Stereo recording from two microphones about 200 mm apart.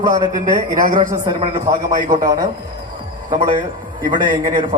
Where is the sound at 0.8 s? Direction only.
40° right (ahead or behind).